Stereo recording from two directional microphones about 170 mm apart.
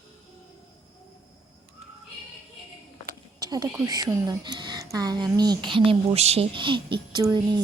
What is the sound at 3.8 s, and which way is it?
A woman's voice, 20° right (ahead or behind).